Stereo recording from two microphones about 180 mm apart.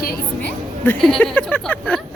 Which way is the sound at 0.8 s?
5° left (ahead or behind).